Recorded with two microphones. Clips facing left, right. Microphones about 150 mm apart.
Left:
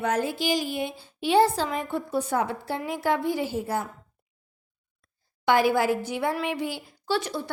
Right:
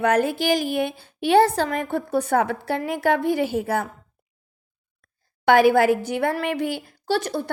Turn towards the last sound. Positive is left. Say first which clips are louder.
# right 4 dB
turn(degrees=-40)  # may be behind; listen again after turning